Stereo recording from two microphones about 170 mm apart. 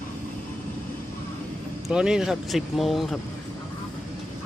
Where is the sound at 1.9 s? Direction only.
5° right (ahead or behind).